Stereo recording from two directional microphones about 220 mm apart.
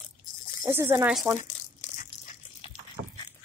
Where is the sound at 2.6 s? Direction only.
20° left (ahead or behind).